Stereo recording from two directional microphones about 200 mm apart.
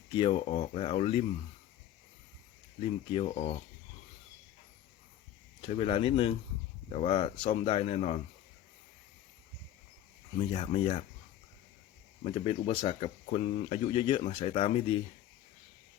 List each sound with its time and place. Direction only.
0.1 s speech: 25° left (ahead or behind)
2.8 s speech: 30° left (ahead or behind)
5.6 s speech: 30° left (ahead or behind)
10.3 s speech: 30° left (ahead or behind)
12.2 s speech: 30° left (ahead or behind)